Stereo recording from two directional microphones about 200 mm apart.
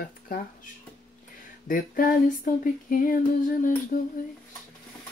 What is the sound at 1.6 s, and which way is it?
Speech, 45° left (ahead or behind).